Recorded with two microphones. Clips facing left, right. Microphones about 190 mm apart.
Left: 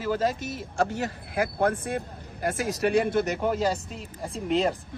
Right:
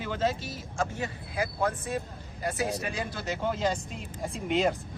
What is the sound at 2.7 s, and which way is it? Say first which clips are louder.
Speech: left 9 dB; 75° left (ahead or behind).